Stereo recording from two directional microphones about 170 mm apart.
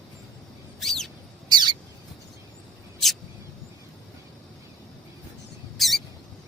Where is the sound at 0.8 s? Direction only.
Centre (ahead or behind).